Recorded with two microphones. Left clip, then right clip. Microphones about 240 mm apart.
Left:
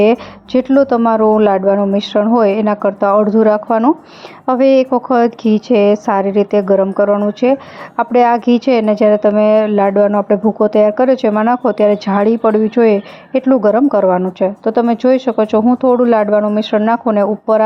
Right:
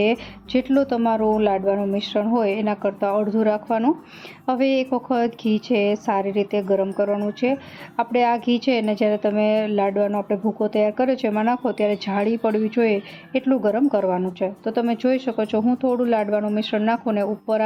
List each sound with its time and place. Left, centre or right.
0.0 s a woman's voice: left